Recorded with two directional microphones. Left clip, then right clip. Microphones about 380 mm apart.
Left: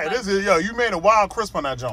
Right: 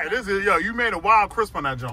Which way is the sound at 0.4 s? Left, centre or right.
Centre.